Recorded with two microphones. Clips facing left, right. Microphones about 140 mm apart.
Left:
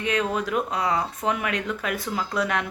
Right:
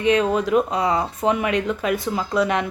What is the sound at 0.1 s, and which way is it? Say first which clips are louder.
A woman's voice: right 7 dB; 30° right (ahead or behind).